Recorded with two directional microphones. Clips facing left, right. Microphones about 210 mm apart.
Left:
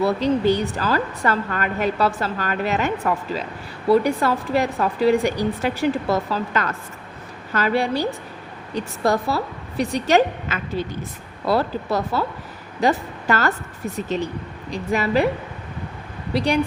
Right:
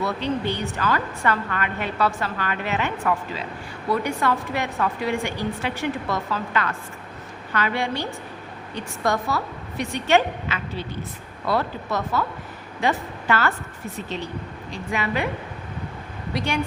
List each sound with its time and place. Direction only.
0.0 s a woman's voice: 40° left (ahead or behind)
16.3 s a woman's voice: 35° left (ahead or behind)